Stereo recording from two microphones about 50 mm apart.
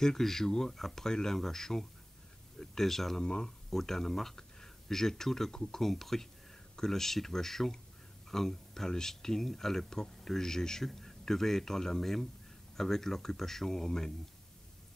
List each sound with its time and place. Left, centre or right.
0.0 s speech: centre